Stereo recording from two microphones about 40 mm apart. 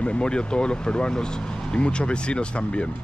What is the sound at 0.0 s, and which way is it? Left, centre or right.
Speech, left.